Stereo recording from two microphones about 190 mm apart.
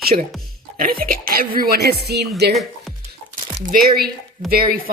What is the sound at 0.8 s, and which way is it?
Speech, 50° right (ahead or behind).